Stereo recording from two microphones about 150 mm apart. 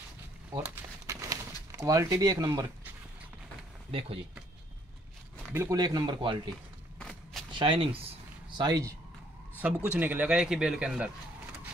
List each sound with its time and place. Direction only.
0.6 s crumpling: 20° right (ahead or behind)
3.9 s speech: 40° right (ahead or behind)
5.5 s speech: 15° right (ahead or behind)
5.8 s speech: 30° right (ahead or behind)
7.0 s a sound: 5° left (ahead or behind)
7.5 s speech: 35° right (ahead or behind)
8.5 s speech: 25° right (ahead or behind)
9.8 s a man's voice: 10° right (ahead or behind)